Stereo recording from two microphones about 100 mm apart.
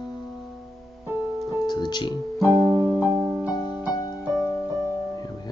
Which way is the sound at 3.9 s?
30° left (ahead or behind).